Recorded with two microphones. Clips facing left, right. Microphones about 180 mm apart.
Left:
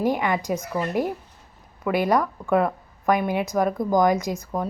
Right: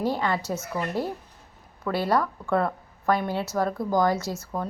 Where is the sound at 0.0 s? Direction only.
15° left (ahead or behind).